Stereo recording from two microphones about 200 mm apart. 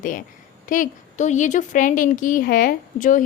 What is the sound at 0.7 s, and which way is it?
A woman's voice, 40° left (ahead or behind).